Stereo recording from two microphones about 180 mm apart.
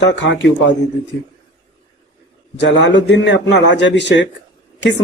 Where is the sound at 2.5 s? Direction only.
80° left.